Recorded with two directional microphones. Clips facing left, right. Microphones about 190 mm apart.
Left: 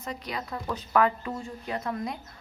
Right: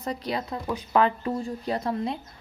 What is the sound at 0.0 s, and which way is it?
Speech, 35° right (ahead or behind).